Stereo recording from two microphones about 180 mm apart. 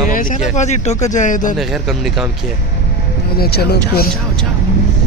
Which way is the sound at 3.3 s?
65° left (ahead or behind).